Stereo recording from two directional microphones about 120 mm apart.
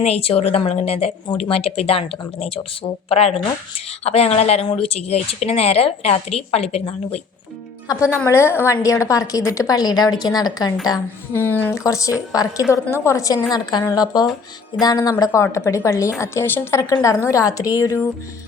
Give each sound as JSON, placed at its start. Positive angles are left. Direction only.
{"t": 0.0, "sound": "speech", "side_deg": 55}
{"t": 7.9, "sound": "a woman's voice", "side_deg": 25}
{"t": 11.3, "sound": "speech", "side_deg": 15}
{"t": 11.8, "sound": "a woman's voice", "side_deg": 25}